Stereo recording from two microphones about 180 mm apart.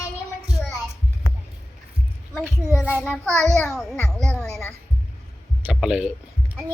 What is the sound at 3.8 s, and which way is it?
Music, centre (ahead or behind).